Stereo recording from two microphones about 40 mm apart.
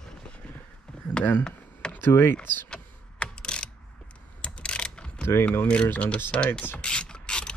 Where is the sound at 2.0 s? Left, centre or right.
Left.